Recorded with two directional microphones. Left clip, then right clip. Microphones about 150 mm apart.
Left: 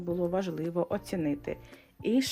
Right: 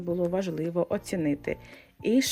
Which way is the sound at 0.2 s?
20° right (ahead or behind).